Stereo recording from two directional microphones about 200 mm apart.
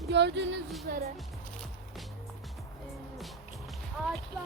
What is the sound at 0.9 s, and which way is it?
Speech, 50° right (ahead or behind).